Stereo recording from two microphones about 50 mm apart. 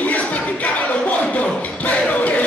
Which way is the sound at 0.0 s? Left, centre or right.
Left.